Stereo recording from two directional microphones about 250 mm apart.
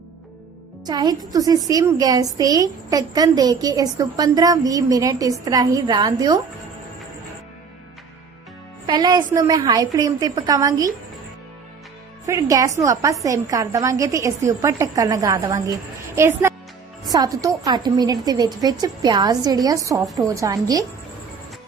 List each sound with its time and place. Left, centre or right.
0.9 s a woman's voice: centre
8.9 s a woman's voice: centre
12.2 s a woman's voice: centre